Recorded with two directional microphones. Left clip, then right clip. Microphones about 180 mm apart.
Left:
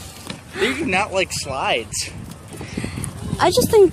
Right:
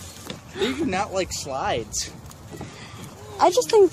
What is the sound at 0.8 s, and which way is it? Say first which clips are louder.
Speech: left 5 dB; 60° right (ahead or behind).